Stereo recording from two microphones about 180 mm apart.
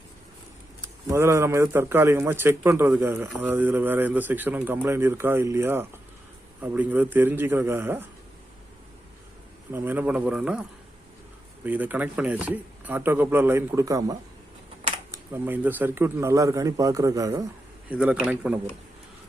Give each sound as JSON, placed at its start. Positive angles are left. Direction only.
{"t": 0.8, "sound": "a man's voice", "side_deg": -15}
{"t": 9.7, "sound": "a man's voice", "side_deg": -10}
{"t": 11.6, "sound": "a man's voice", "side_deg": -10}
{"t": 17.8, "sound": "a man's voice", "side_deg": -5}